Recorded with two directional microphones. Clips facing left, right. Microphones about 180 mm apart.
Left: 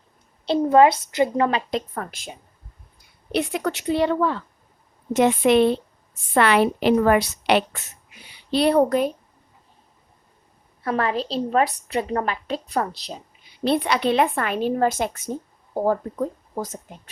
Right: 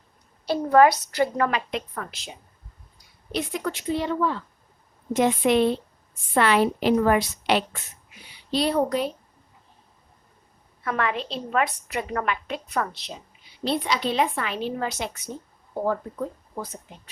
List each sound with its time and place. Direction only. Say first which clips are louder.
0.4 s a woman's voice: left 2 dB; 20° left (ahead or behind); by 2.3 s 50° left (ahead or behind)
3.3 s a woman's voice: left 4 dB; 70° left (ahead or behind); by 9.1 s 50° left (ahead or behind)
10.8 s a woman's voice: left 3 dB; 35° left (ahead or behind)
13.7 s a woman's voice: left 5 dB; 60° left (ahead or behind)
15.7 s speech: left 4 dB; 40° left (ahead or behind)